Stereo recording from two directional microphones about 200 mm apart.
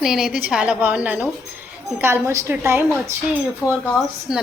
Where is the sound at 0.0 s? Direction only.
Centre (ahead or behind).